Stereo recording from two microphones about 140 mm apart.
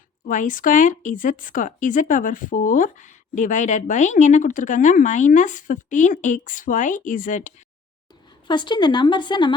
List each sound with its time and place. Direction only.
0.3 s speech: 70° left (ahead or behind)
8.4 s speech: 35° left (ahead or behind)